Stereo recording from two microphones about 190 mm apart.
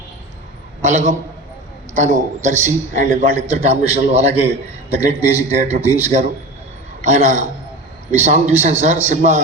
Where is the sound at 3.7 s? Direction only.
35° right (ahead or behind).